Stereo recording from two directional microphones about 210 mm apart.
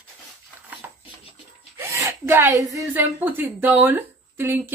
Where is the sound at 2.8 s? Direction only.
10° right (ahead or behind).